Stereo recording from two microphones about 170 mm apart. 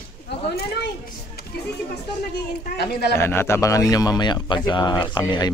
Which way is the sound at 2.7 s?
75° left (ahead or behind).